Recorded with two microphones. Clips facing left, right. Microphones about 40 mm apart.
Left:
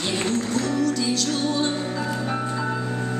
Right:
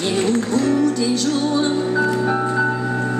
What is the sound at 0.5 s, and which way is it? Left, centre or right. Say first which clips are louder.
Music: right 6 dB; right.